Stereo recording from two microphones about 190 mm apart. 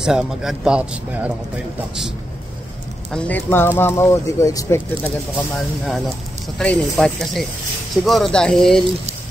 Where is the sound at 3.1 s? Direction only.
5° left (ahead or behind).